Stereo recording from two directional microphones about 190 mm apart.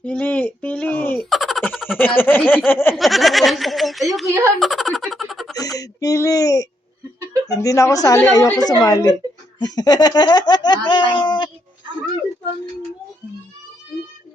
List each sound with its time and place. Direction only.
0.0 s speech: 5° left (ahead or behind)
1.3 s a sound: centre (ahead or behind)
1.7 s speech: 5° right (ahead or behind)
2.0 s speech: 10° left (ahead or behind)
2.9 s speech: centre (ahead or behind)
4.6 s a sound: centre (ahead or behind)
5.5 s a woman's voice: 20° left (ahead or behind)